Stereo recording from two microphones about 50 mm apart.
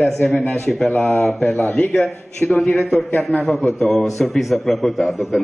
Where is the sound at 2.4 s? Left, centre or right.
Left.